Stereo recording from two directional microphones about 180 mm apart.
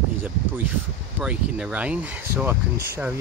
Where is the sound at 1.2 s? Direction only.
5° right (ahead or behind).